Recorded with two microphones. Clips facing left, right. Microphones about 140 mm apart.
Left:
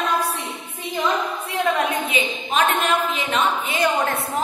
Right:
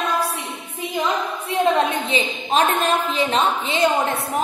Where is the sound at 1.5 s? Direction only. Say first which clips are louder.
Right 3 dB; 25° right (ahead or behind).